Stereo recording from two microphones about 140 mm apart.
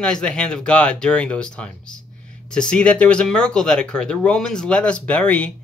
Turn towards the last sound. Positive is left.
turn(degrees=10)  # may be behind; listen again after turning